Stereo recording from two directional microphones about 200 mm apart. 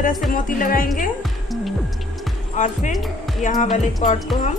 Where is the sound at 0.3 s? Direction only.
45° left (ahead or behind).